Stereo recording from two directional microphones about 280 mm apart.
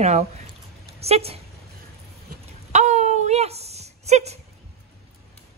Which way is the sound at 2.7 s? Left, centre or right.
Right.